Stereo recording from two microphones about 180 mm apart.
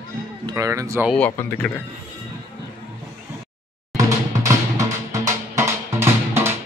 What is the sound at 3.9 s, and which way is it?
Music, 20° right (ahead or behind).